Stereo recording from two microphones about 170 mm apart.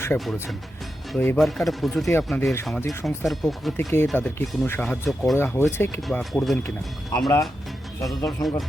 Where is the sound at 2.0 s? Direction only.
15° left (ahead or behind).